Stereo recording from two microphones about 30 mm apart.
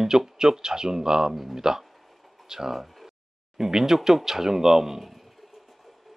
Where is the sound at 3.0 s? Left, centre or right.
Centre.